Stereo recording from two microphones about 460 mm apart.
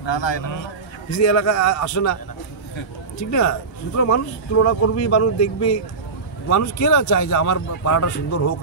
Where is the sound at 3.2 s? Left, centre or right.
Left.